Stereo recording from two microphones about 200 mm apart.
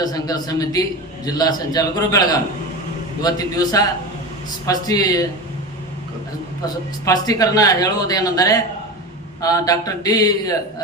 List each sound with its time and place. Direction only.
0.0 s a man's voice: 20° left (ahead or behind)
7.0 s speech: 20° left (ahead or behind)